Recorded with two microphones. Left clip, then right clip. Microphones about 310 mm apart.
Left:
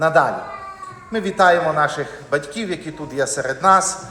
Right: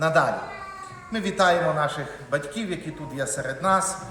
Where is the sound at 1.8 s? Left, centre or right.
Left.